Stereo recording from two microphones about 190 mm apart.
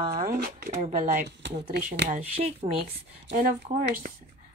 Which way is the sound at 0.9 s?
45° right (ahead or behind).